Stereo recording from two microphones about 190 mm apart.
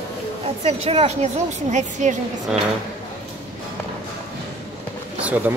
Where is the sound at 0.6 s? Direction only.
30° right (ahead or behind).